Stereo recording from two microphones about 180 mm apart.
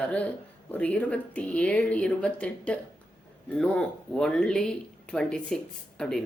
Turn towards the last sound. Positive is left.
turn(degrees=5)  # may be behind; listen again after turning